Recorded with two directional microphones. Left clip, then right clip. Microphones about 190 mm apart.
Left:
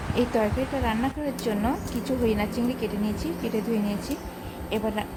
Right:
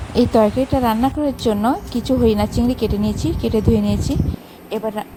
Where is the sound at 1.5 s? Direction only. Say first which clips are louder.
Right 8 dB; 40° right (ahead or behind).